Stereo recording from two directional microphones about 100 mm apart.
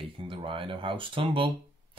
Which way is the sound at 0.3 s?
60° right (ahead or behind).